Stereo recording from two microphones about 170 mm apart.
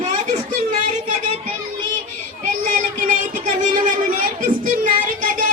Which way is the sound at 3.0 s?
50° right (ahead or behind).